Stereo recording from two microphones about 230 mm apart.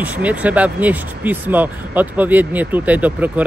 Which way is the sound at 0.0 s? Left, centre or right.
Centre.